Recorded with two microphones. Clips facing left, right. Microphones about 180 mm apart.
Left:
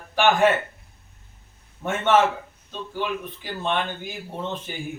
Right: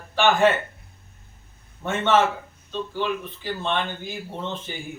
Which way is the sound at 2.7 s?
10° left (ahead or behind).